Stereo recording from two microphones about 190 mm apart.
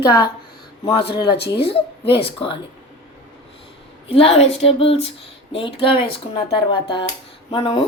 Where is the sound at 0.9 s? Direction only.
25° left (ahead or behind).